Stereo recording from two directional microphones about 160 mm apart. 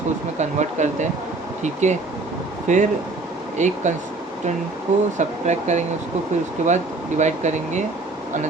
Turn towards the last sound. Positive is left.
turn(degrees=-45)  # may be behind; listen again after turning